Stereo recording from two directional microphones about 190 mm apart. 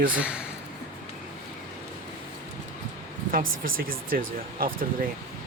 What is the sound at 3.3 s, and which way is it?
Speech, 50° right (ahead or behind).